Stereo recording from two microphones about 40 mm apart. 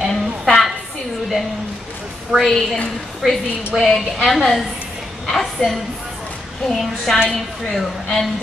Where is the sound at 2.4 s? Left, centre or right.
Centre.